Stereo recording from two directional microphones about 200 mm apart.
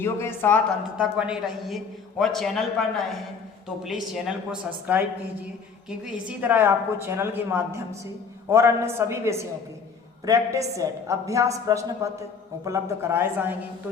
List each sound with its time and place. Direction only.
0.0 s speech: 10° left (ahead or behind)
0.9 s a man's voice: 5° right (ahead or behind)